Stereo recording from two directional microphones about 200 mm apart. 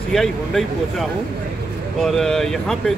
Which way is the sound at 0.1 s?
Centre (ahead or behind).